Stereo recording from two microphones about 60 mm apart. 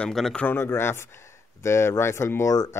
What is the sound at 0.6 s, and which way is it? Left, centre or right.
Speech, left.